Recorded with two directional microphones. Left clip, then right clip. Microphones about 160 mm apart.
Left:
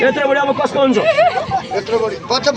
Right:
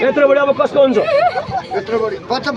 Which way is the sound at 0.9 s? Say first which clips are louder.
Left 1 dB; 10° right (ahead or behind).